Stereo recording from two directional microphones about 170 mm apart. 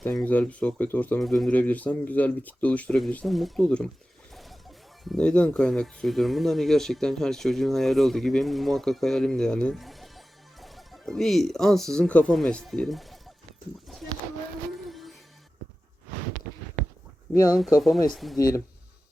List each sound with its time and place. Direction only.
0.0 s speech: 5° left (ahead or behind)
5.0 s speech: 5° left (ahead or behind)
14.8 s music: centre (ahead or behind)
17.3 s speech: 20° left (ahead or behind)
17.7 s speech: centre (ahead or behind)